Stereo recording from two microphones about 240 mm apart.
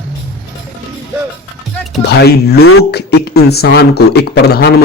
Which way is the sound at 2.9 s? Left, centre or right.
Left.